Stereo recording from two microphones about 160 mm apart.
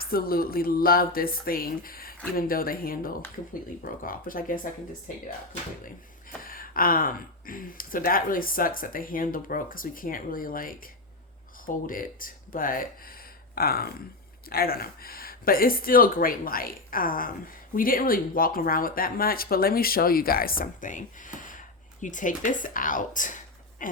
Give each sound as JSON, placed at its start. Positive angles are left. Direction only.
{"t": 0.0, "sound": "speech", "side_deg": 70}
{"t": 6.4, "sound": "speech", "side_deg": 60}